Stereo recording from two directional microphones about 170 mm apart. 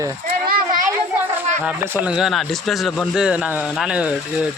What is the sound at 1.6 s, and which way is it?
Speech, 10° right (ahead or behind).